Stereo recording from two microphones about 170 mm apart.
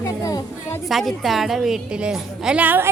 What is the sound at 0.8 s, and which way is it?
A woman's voice, centre (ahead or behind).